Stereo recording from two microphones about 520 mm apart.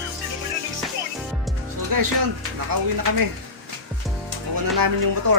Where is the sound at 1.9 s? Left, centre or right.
Right.